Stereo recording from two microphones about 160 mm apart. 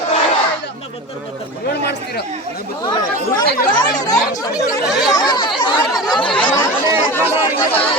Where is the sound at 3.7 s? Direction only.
25° left (ahead or behind).